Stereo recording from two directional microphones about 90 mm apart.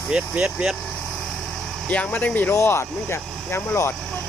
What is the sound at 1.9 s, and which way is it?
Speech, 15° left (ahead or behind).